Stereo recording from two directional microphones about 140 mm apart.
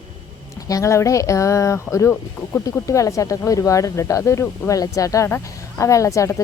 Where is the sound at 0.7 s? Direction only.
20° left (ahead or behind).